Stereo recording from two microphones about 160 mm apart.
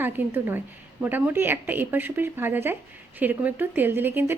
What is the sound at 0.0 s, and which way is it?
A woman's voice, 15° right (ahead or behind).